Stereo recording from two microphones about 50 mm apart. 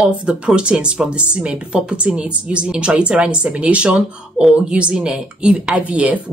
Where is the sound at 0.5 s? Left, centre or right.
Centre.